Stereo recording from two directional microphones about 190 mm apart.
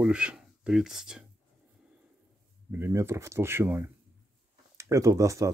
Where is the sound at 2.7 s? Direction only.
15° right (ahead or behind).